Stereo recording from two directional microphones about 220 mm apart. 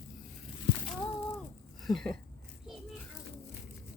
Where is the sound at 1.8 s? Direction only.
Centre (ahead or behind).